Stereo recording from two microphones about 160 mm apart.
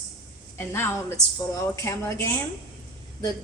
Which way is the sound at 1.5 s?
20° left (ahead or behind).